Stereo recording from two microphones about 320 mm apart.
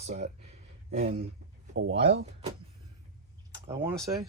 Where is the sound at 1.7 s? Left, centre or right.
Right.